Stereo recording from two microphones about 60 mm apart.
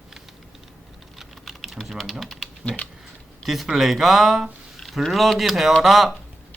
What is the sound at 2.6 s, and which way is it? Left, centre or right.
Speech, centre.